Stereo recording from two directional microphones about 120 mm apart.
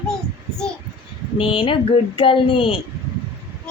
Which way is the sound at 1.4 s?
45° left (ahead or behind).